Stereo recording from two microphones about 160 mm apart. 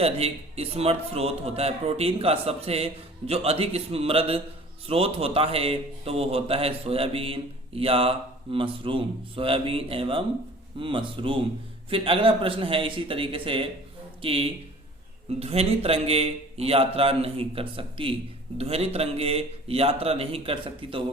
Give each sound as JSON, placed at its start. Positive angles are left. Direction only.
{"t": 0.0, "sound": "a man's voice", "side_deg": -40}